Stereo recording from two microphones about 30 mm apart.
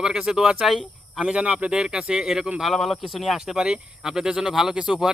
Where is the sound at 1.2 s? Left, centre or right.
Right.